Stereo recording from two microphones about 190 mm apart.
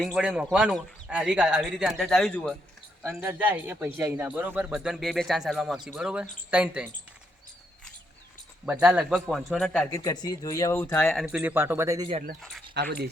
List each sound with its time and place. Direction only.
0.0 s a man's voice: 5° right (ahead or behind)
3.1 s a man's voice: 5° right (ahead or behind)
8.6 s a man's voice: 10° right (ahead or behind)
10.0 s speech: 20° left (ahead or behind)
11.3 s a man's voice: 5° right (ahead or behind)
12.4 s a man's voice: centre (ahead or behind)
12.7 s speech: 60° right (ahead or behind)